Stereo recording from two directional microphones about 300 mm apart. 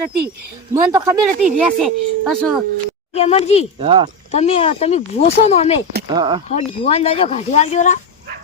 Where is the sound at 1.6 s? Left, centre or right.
Centre.